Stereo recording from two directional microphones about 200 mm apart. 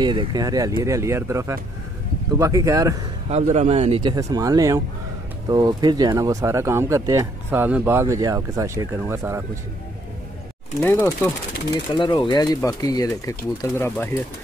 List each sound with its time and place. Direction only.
0.0 s speech: 20° right (ahead or behind)
3.3 s speech: 35° right (ahead or behind); by 9.4 s 10° right (ahead or behind)
10.8 s speech: 10° left (ahead or behind)